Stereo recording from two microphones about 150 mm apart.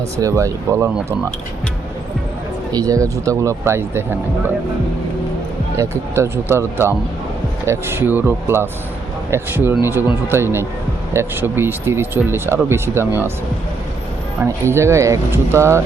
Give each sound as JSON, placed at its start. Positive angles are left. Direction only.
{"t": 0.2, "sound": "speech", "side_deg": -20}
{"t": 2.7, "sound": "speech", "side_deg": -25}
{"t": 5.7, "sound": "speech", "side_deg": -20}
{"t": 14.4, "sound": "speech", "side_deg": -20}